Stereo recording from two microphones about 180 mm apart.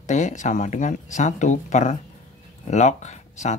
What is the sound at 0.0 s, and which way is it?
Speech, 40° left (ahead or behind).